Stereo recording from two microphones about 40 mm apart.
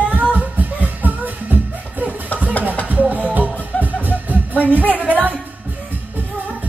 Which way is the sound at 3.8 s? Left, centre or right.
Left.